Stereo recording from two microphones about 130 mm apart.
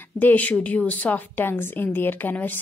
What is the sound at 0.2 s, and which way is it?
A woman's voice, 15° left (ahead or behind).